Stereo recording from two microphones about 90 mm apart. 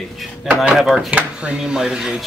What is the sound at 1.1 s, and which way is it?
Speech, 15° right (ahead or behind).